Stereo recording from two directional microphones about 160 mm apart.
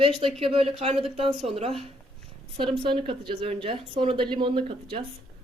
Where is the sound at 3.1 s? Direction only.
35° right (ahead or behind).